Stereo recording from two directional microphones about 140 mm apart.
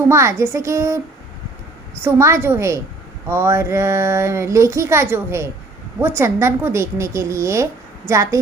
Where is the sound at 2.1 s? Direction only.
20° right (ahead or behind).